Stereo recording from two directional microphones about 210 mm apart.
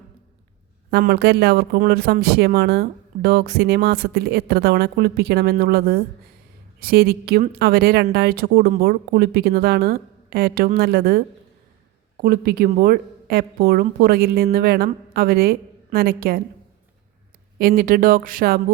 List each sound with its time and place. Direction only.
0.9 s speech: 50° right (ahead or behind)
17.6 s speech: 45° right (ahead or behind)